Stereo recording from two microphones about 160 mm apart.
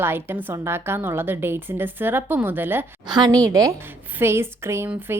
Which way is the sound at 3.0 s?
25° right (ahead or behind).